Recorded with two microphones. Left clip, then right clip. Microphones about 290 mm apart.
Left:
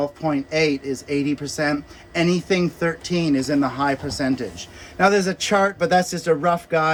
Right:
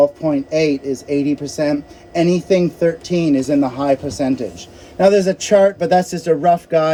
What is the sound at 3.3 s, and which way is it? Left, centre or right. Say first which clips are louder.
Speech: right 3 dB; right.